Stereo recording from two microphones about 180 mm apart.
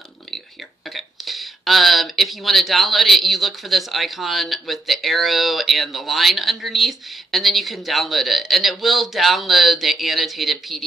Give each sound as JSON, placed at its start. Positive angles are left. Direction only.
{"t": 0.9, "sound": "speech", "side_deg": 0}